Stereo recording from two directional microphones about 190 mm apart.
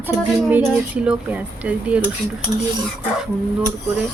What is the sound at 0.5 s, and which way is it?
Speech, 10° right (ahead or behind).